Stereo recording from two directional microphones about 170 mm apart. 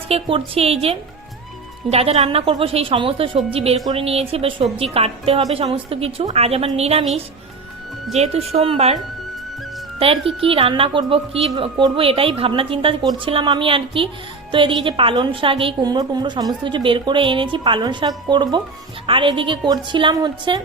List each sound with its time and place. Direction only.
0.1 s a woman's voice: 30° right (ahead or behind)
8.1 s a woman's voice: 40° right (ahead or behind)
10.4 s a woman's voice: 30° right (ahead or behind)